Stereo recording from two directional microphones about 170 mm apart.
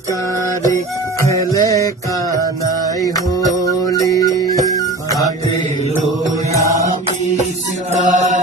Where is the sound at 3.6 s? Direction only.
20° left (ahead or behind).